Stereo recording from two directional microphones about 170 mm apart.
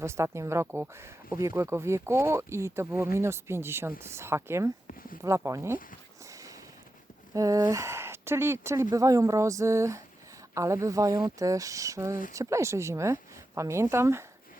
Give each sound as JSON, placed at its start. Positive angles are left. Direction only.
{"t": 0.0, "sound": "speech", "side_deg": -15}
{"t": 7.3, "sound": "speech", "side_deg": -20}